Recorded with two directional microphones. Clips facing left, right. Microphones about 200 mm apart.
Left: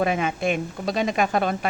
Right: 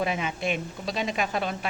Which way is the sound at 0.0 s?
50° left (ahead or behind).